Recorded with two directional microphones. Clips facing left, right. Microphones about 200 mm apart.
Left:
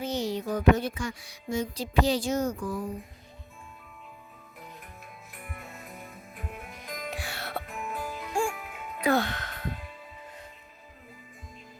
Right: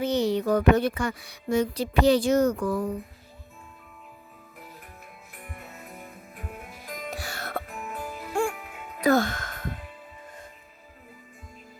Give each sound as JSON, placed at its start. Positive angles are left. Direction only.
{"t": 0.0, "sound": "speech", "side_deg": -65}
{"t": 6.7, "sound": "music", "side_deg": -5}
{"t": 7.1, "sound": "music", "side_deg": -40}
{"t": 7.9, "sound": "music", "side_deg": -20}
{"t": 9.0, "sound": "music", "side_deg": -45}